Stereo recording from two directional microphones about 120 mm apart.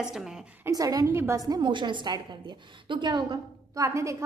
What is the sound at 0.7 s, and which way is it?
A woman's voice, 30° right (ahead or behind).